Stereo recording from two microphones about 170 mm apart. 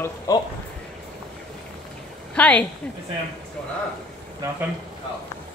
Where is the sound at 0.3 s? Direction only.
20° left (ahead or behind).